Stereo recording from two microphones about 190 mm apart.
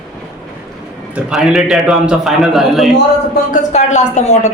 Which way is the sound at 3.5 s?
40° left (ahead or behind).